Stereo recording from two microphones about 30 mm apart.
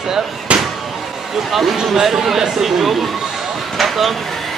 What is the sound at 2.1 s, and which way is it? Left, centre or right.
Speech, centre.